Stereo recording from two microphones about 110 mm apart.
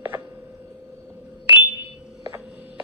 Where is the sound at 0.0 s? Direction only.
20° right (ahead or behind).